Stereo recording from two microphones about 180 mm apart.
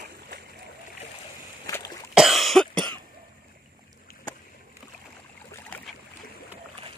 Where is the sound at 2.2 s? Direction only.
Centre (ahead or behind).